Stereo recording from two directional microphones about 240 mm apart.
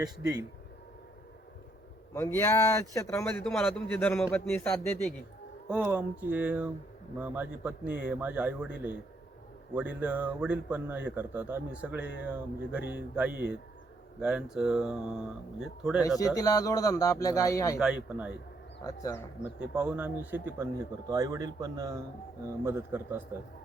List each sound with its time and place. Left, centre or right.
0.0 s speech: centre
2.1 s a man's voice: centre
5.6 s speech: centre
9.7 s speech: centre
16.0 s a man's voice: centre
17.7 s speech: centre
18.9 s a man's voice: centre
19.4 s speech: centre